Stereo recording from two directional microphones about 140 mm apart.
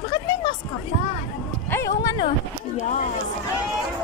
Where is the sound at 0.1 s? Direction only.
35° left (ahead or behind).